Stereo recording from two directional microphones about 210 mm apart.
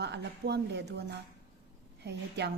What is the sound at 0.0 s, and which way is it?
Speech, 55° right (ahead or behind).